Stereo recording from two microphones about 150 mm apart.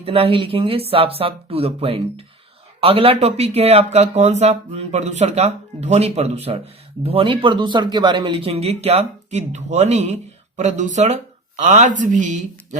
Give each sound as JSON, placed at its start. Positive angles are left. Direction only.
{"t": 0.0, "sound": "speech", "side_deg": -40}